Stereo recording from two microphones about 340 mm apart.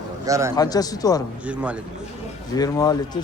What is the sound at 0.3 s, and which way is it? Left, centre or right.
Speech, centre.